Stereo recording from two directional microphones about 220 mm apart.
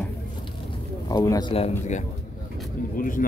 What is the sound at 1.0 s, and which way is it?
Speech, 15° left (ahead or behind).